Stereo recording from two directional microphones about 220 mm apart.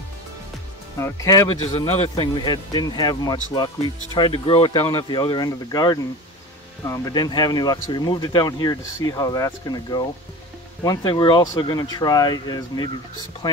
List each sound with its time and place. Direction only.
0.9 s speech: 15° left (ahead or behind)
1.9 s speech: 25° left (ahead or behind)